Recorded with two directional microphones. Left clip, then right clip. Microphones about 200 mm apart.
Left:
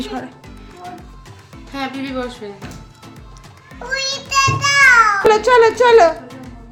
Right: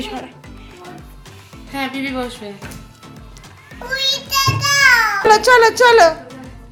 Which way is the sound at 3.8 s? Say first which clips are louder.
Right 3 dB; 10° left (ahead or behind).